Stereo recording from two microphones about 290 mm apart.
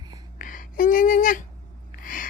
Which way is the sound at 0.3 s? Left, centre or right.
Left.